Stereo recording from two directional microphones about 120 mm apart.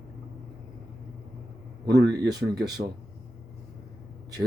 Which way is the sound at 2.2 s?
35° right (ahead or behind).